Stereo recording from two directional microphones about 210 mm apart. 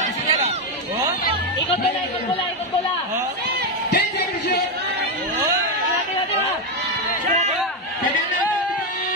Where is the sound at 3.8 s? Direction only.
50° left (ahead or behind).